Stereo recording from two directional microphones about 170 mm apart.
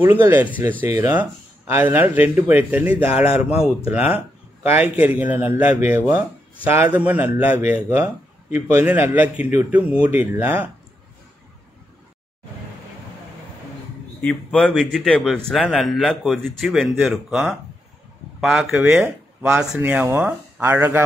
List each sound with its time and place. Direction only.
0.0 s a man's voice: 15° right (ahead or behind)
14.2 s a man's voice: 5° left (ahead or behind); by 21.0 s 15° right (ahead or behind)